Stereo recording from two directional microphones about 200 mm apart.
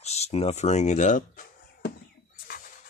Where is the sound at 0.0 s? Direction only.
30° left (ahead or behind).